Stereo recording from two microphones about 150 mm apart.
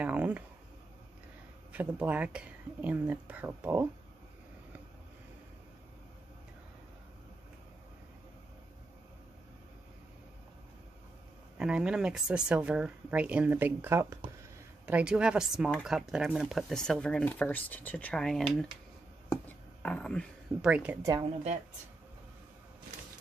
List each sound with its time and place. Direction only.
0.0 s a sound: 10° right (ahead or behind)
1.7 s speech: 10° right (ahead or behind)
11.5 s speech: 5° right (ahead or behind)
19.8 s speech: 5° left (ahead or behind)
20.6 s speech: 10° right (ahead or behind)
21.0 s speech: 25° right (ahead or behind)